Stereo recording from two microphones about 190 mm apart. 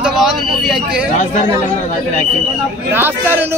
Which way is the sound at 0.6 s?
Centre (ahead or behind).